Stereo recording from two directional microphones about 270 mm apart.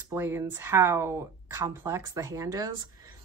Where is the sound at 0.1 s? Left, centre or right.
Centre.